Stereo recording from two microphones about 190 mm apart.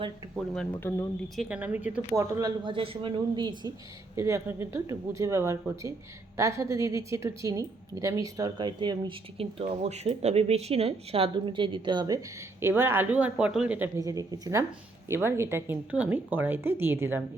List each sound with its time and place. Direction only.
0.3 s speech: centre (ahead or behind)
0.8 s speech: 10° left (ahead or behind)
1.4 s a woman's voice: 5° right (ahead or behind)